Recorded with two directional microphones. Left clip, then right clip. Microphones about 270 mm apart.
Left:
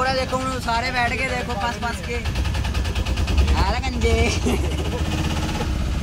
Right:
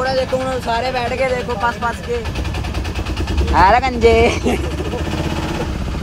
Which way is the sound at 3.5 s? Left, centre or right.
Centre.